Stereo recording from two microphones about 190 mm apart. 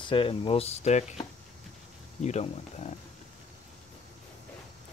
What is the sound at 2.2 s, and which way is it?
Speech, 35° left (ahead or behind).